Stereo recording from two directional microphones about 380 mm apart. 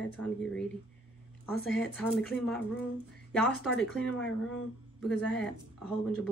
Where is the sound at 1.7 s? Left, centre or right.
Centre.